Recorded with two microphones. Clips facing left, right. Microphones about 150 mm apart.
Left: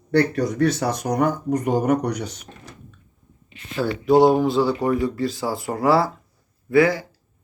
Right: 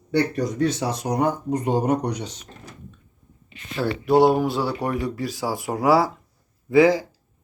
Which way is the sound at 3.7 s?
Centre (ahead or behind).